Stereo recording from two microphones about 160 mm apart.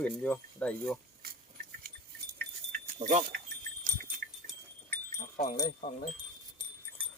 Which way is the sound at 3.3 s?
80° right.